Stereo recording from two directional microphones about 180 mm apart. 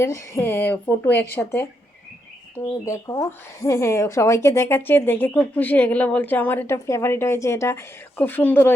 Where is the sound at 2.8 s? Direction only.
20° left (ahead or behind).